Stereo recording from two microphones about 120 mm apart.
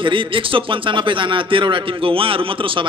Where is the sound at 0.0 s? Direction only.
45° right (ahead or behind).